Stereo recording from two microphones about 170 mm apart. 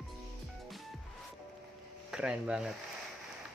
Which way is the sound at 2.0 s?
5° right (ahead or behind).